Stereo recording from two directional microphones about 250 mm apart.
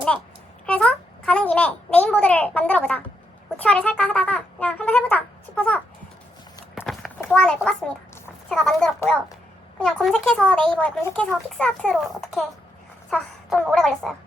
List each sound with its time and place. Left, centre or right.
0.6 s a child's voice: centre
6.7 s a sound: centre
8.4 s a child's voice: centre